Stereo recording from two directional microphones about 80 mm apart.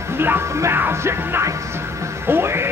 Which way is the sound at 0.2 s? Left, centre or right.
Right.